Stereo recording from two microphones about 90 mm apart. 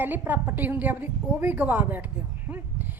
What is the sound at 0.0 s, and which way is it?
A woman's voice, 20° right (ahead or behind).